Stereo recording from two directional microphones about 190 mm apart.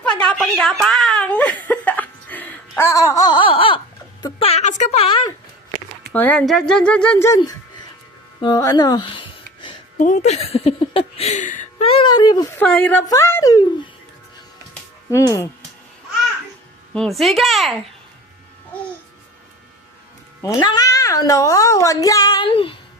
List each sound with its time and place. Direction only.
0.3 s a sound: 5° left (ahead or behind); by 5.3 s 30° left (ahead or behind)
6.1 s speech: 5° left (ahead or behind)
8.4 s music: 20° left (ahead or behind)
10.0 s a sound: 40° left (ahead or behind)
11.9 s speech: 25° left (ahead or behind)
12.5 s speech: 5° left (ahead or behind)
15.1 s speech: 15° left (ahead or behind)
16.9 s speech: centre (ahead or behind)
20.4 s speech: 20° left (ahead or behind)